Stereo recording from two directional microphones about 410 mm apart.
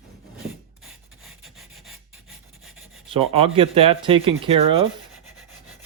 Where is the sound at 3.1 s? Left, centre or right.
Centre.